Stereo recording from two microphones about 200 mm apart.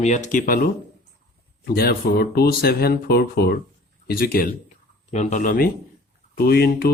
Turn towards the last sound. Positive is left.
turn(degrees=50)  # may be behind; listen again after turning